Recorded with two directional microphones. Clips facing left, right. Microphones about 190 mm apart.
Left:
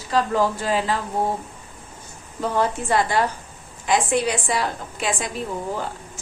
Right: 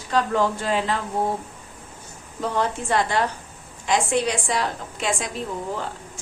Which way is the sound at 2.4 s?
5° left (ahead or behind).